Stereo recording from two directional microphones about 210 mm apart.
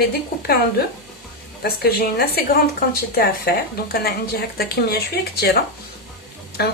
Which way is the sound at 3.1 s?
45° left (ahead or behind).